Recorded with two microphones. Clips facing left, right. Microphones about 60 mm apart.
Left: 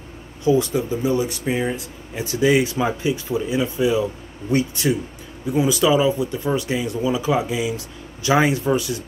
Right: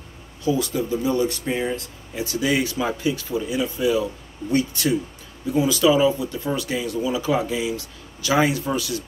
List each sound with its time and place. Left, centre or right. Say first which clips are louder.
0.4 s speech: left 4 dB; left